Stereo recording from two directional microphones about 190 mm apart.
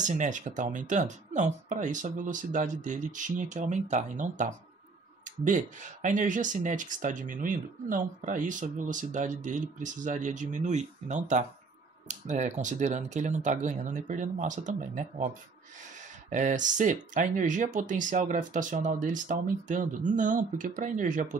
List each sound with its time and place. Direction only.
0.0 s speech: 40° right (ahead or behind)
16.3 s speech: 40° right (ahead or behind)